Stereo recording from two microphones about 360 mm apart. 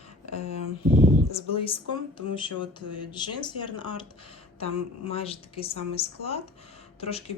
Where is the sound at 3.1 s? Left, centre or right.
Centre.